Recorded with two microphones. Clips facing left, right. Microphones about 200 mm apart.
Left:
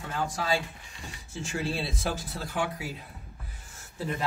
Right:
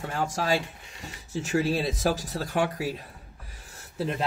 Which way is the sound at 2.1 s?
40° right (ahead or behind).